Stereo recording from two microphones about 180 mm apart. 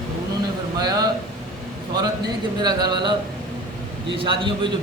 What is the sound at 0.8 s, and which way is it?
Speech, 20° right (ahead or behind).